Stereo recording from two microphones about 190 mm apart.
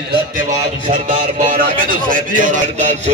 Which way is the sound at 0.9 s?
40° right (ahead or behind).